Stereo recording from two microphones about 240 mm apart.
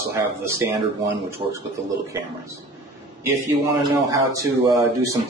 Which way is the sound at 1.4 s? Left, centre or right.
Right.